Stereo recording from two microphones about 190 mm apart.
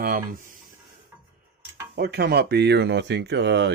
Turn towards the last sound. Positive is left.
turn(degrees=-65)  # may be behind; listen again after turning